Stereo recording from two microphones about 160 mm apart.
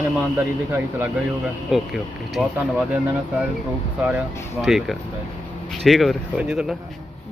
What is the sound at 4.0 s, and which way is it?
Speech, 5° right (ahead or behind).